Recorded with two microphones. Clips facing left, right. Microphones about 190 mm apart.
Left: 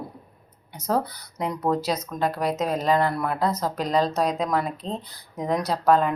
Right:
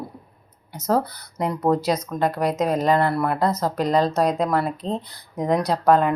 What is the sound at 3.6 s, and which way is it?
Speech, 10° right (ahead or behind).